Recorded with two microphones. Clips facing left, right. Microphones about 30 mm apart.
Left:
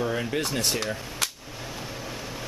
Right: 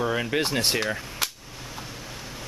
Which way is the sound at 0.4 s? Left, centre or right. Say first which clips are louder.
Right 3 dB; right.